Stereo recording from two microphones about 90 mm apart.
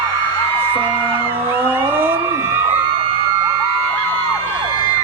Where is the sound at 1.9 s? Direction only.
20° right (ahead or behind).